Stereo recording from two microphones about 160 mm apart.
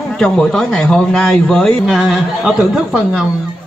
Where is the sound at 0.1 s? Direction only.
5° left (ahead or behind).